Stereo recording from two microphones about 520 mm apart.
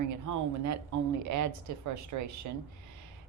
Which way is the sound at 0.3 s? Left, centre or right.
Right.